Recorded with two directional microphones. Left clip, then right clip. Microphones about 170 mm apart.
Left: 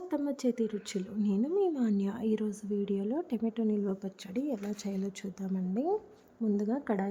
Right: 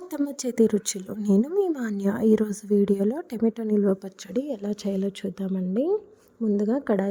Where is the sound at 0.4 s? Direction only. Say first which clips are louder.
Right 10 dB; 45° right (ahead or behind).